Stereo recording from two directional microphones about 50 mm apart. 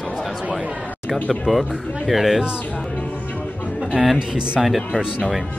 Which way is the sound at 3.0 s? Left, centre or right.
Left.